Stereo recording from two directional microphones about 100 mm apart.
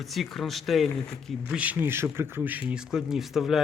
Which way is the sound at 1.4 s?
15° right (ahead or behind).